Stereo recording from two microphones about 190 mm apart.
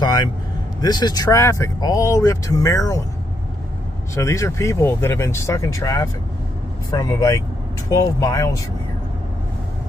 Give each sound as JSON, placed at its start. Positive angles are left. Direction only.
{"t": 0.0, "sound": "vehicle", "side_deg": 20}
{"t": 0.7, "sound": "speech", "side_deg": 20}
{"t": 4.1, "sound": "speech", "side_deg": 15}